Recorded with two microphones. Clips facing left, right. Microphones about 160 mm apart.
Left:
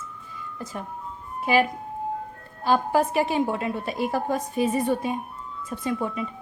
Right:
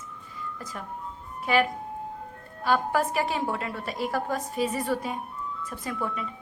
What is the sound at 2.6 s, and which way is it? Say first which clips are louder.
A woman's voice: left 3 dB; 25° left (ahead or behind).